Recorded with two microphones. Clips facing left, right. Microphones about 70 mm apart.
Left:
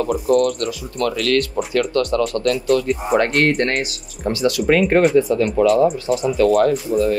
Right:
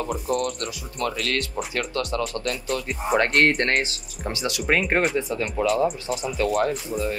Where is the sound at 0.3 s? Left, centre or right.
Left.